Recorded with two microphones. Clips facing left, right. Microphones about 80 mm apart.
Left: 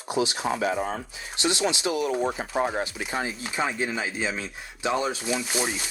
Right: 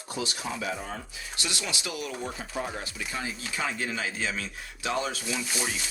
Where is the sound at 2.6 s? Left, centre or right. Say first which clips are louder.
Left 8 dB; left.